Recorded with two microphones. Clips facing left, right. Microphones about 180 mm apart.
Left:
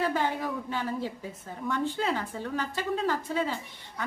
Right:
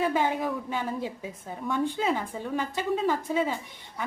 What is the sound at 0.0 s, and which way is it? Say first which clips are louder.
A woman's voice: right 2 dB; 15° right (ahead or behind).